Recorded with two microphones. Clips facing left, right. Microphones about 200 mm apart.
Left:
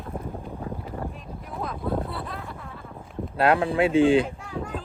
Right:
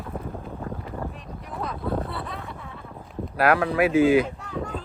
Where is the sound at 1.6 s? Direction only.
Centre (ahead or behind).